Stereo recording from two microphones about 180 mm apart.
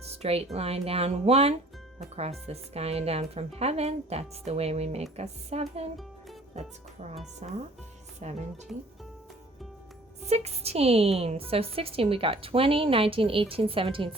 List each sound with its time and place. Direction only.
0.2 s a woman's voice: 35° right (ahead or behind)
10.2 s a woman's voice: 35° right (ahead or behind)